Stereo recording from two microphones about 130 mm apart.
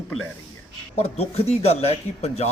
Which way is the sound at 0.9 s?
55° left (ahead or behind).